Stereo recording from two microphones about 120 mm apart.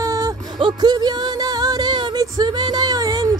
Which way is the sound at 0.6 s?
40° right (ahead or behind).